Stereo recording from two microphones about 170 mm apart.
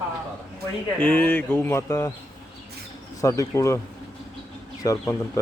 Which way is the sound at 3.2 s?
20° left (ahead or behind).